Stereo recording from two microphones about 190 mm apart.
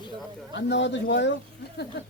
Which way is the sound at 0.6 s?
70° left (ahead or behind).